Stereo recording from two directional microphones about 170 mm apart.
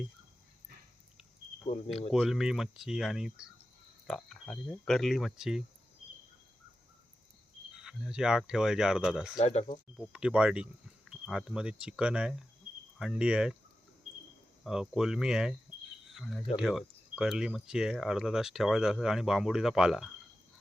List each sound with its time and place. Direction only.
2.1 s speech: centre (ahead or behind)
7.7 s speech: 5° right (ahead or behind)
9.4 s speech: 40° left (ahead or behind)
10.0 s speech: 5° right (ahead or behind)
14.6 s speech: 5° right (ahead or behind)
16.0 s cricket: centre (ahead or behind)
16.6 s speech: 5° right (ahead or behind)